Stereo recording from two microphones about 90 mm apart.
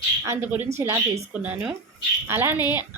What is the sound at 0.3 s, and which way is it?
Speech, 20° right (ahead or behind).